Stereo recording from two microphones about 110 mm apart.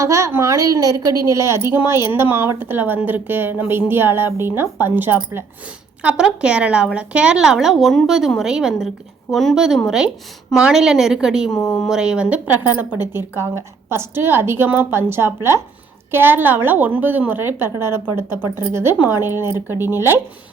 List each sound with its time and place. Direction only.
0.0 s a woman's voice: 30° right (ahead or behind); by 11.5 s 5° right (ahead or behind)
11.5 s speech: 35° left (ahead or behind)
11.9 s a woman's voice: 5° right (ahead or behind); by 19.7 s 20° right (ahead or behind)